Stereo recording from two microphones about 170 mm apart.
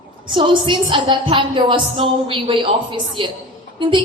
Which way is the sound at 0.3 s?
30° right (ahead or behind).